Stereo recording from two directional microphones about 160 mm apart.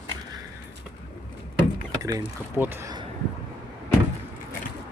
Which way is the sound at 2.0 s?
20° right (ahead or behind).